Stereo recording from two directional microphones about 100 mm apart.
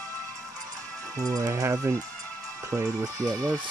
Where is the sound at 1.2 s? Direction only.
35° right (ahead or behind).